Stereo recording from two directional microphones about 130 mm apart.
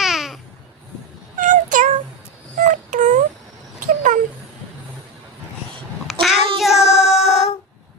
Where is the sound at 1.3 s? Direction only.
75° right (ahead or behind).